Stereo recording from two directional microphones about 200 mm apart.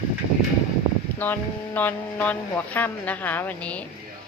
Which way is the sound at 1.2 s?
10° left (ahead or behind).